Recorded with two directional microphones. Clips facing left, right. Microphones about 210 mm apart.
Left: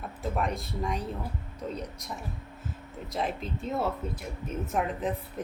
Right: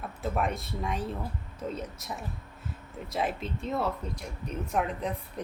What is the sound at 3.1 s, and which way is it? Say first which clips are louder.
Speech: right 1 dB; centre (ahead or behind).